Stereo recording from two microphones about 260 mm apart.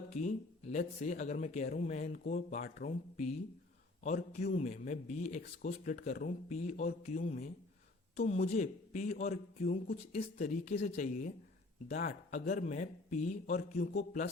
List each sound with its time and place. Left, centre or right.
0.1 s a man's voice: left